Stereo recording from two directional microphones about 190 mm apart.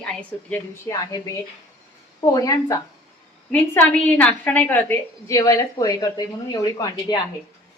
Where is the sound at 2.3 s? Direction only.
20° left (ahead or behind).